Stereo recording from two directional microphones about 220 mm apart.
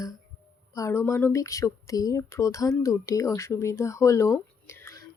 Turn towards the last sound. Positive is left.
turn(degrees=10)  # may be behind; listen again after turning